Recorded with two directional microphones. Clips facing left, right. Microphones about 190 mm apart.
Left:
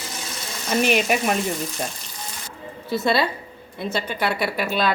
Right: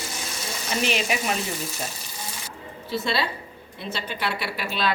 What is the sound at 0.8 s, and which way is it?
Speech, 50° left (ahead or behind).